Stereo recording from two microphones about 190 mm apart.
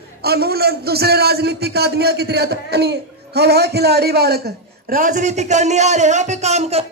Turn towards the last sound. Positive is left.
turn(degrees=-35)  # may be behind; listen again after turning